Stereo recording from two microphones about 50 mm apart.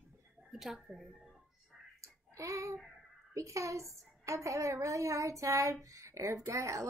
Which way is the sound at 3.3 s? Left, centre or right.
Right.